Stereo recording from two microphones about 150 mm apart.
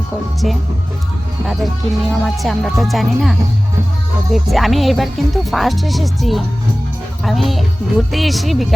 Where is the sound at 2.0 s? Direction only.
Centre (ahead or behind).